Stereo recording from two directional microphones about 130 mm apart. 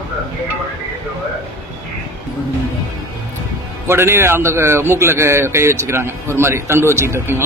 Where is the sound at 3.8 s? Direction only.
20° right (ahead or behind).